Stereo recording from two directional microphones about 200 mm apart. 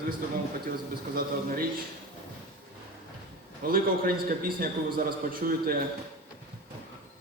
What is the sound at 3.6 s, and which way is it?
A man's voice, 45° right (ahead or behind).